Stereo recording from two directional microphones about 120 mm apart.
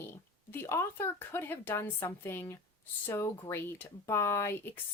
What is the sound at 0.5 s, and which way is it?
Speech, 20° left (ahead or behind).